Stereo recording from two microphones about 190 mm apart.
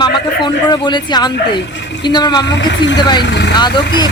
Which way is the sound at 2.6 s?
75° left (ahead or behind).